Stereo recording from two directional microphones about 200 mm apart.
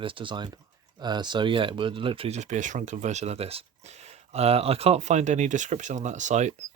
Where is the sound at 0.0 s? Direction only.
25° right (ahead or behind).